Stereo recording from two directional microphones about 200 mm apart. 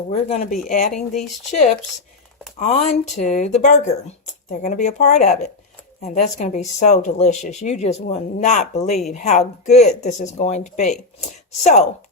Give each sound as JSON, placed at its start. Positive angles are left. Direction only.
{"t": 0.1, "sound": "speech", "side_deg": 35}
{"t": 2.6, "sound": "speech", "side_deg": 35}